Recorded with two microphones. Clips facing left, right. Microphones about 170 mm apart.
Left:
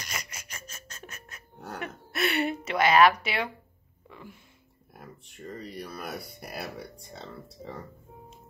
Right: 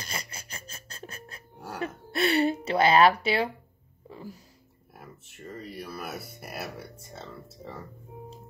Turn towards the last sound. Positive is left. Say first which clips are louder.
# left 1 dB
turn(degrees=-5)  # may be behind; listen again after turning